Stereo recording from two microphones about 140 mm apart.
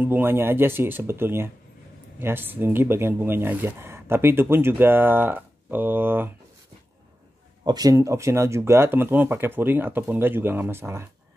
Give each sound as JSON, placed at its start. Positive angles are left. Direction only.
{"t": 0.0, "sound": "speech", "side_deg": -15}
{"t": 7.6, "sound": "speech", "side_deg": -25}